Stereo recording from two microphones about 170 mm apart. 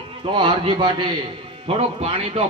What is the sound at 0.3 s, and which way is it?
A man's voice, 30° right (ahead or behind).